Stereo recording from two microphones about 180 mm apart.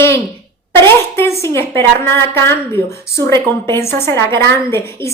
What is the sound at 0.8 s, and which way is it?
A woman's voice, 15° left (ahead or behind).